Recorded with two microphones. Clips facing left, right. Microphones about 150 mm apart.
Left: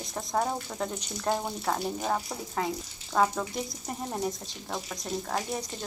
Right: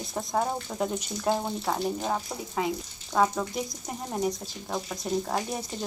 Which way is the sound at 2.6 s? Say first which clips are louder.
Right 2 dB; 10° right (ahead or behind).